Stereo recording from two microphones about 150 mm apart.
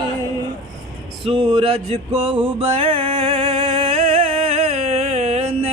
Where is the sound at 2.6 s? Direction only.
40° right (ahead or behind).